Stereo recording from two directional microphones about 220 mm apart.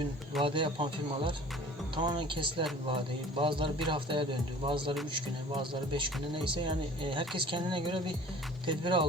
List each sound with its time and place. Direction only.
0.4 s speech: 20° right (ahead or behind)